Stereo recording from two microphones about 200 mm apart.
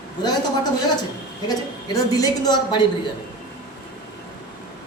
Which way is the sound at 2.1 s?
20° left (ahead or behind).